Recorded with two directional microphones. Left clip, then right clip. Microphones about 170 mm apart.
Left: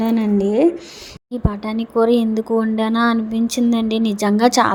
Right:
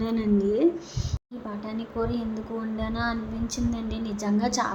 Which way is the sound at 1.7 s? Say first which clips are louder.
Left 15 dB; 50° left (ahead or behind).